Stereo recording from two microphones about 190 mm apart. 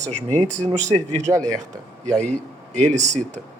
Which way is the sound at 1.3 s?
10° right (ahead or behind).